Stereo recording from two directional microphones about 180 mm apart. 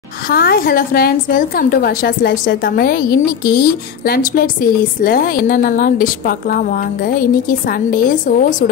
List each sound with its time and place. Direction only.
0.3 s a woman's voice: 55° left (ahead or behind)